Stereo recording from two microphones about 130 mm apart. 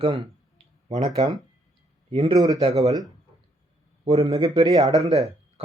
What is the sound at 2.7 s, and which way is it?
Speech, 25° right (ahead or behind).